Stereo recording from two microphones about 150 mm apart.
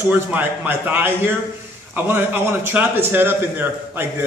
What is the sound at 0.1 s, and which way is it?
A man's voice, 15° right (ahead or behind).